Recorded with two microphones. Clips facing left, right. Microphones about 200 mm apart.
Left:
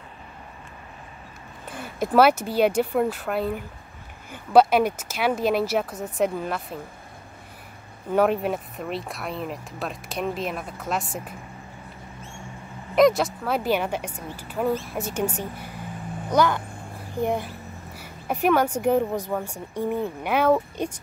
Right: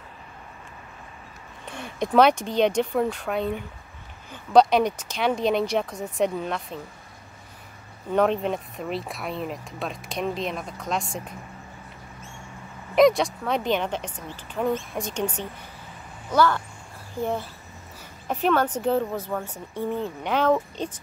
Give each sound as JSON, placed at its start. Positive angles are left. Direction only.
{"t": 1.7, "sound": "speech", "side_deg": 5}
{"t": 8.1, "sound": "speech", "side_deg": 5}
{"t": 12.9, "sound": "speech", "side_deg": 0}